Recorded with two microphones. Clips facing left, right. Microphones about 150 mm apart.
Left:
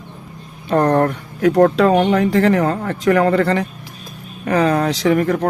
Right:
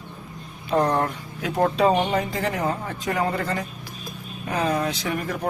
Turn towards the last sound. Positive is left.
turn(degrees=85)